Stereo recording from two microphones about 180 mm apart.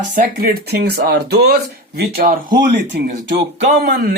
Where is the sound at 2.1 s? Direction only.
50° right (ahead or behind).